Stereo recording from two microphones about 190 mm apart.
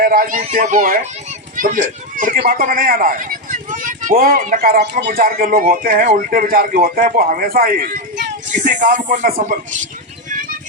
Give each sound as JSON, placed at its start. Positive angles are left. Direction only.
{"t": 0.0, "sound": "speech", "side_deg": -50}
{"t": 8.5, "sound": "speech", "side_deg": -40}